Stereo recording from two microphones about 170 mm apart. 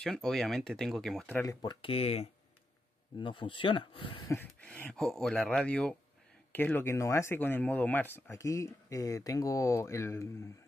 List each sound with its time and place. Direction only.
0.0 s speech: centre (ahead or behind)
1.4 s speech: 20° left (ahead or behind)
4.3 s speech: 10° left (ahead or behind)